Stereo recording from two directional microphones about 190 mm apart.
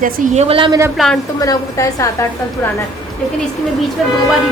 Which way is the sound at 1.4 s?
15° left (ahead or behind).